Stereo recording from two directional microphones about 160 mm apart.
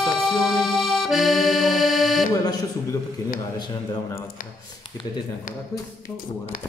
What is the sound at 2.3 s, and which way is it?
Buzzer, 25° left (ahead or behind).